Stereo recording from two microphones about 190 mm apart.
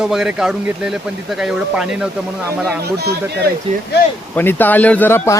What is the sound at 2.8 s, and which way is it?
Speech, 60° right (ahead or behind).